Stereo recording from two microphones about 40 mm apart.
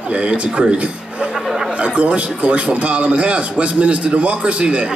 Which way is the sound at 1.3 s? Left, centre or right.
Centre.